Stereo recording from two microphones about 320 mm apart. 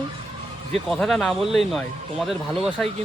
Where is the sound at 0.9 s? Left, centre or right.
Centre.